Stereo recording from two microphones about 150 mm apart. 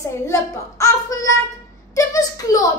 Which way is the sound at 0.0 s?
20° left (ahead or behind).